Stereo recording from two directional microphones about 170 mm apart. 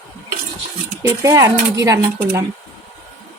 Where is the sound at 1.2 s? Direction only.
20° right (ahead or behind).